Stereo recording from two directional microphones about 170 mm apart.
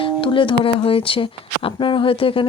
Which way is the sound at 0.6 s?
30° left (ahead or behind).